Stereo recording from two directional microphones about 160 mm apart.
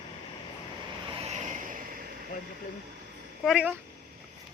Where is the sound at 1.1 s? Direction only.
40° right (ahead or behind).